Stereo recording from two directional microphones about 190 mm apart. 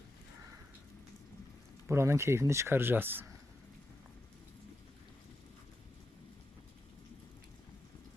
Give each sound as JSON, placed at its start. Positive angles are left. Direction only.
{"t": 1.9, "sound": "speech", "side_deg": -15}